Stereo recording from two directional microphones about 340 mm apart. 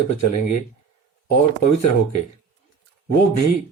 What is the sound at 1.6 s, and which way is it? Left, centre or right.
Speech, left.